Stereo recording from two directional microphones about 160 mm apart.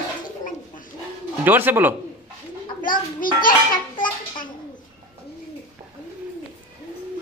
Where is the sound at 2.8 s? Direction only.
60° left (ahead or behind).